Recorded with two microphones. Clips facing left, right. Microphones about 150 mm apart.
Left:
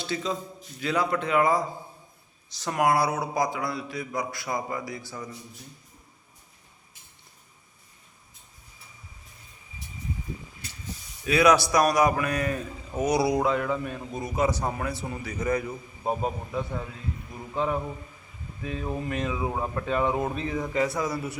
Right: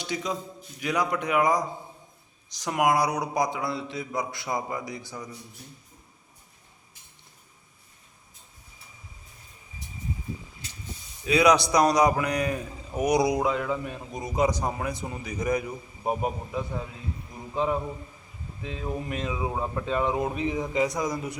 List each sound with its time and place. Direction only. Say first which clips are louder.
0.0 s a man's voice: left 1 dB; 15° right (ahead or behind)
11.2 s a man's voice: even; 20° right (ahead or behind)